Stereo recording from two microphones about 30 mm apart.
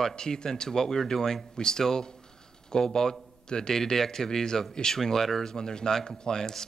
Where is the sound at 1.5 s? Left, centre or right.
Left.